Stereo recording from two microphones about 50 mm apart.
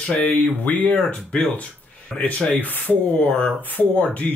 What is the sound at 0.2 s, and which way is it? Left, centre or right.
Speech, left.